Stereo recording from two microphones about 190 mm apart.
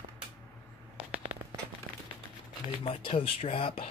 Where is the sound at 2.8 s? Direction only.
30° left (ahead or behind).